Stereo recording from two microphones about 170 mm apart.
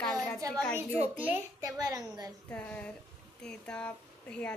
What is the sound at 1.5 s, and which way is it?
Speech, 20° right (ahead or behind).